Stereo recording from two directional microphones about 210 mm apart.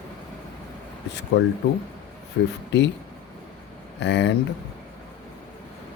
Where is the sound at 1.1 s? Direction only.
55° left (ahead or behind).